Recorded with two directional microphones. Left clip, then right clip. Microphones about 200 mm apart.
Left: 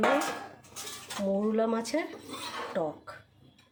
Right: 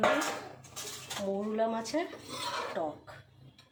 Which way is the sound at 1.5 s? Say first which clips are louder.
Left 2 dB; 60° left (ahead or behind).